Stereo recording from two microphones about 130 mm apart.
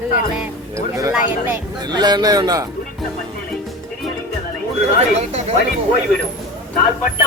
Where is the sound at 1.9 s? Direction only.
30° right (ahead or behind).